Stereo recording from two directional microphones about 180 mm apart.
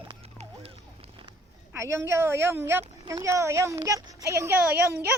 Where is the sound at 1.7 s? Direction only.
15° right (ahead or behind).